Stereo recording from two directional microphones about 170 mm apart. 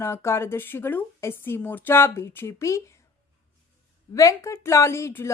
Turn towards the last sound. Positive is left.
turn(degrees=15)  # may be behind; listen again after turning